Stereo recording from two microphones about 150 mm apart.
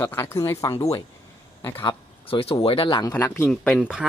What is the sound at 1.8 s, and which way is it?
Speech, 40° left (ahead or behind).